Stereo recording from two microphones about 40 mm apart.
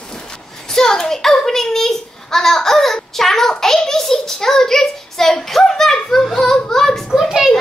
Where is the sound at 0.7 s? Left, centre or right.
Centre.